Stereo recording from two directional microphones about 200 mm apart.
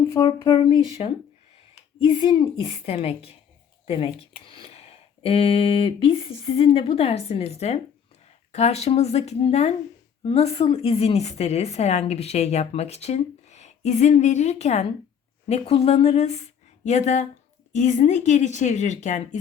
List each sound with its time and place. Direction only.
0.0 s speech: 20° left (ahead or behind)
2.0 s a woman's voice: 25° left (ahead or behind)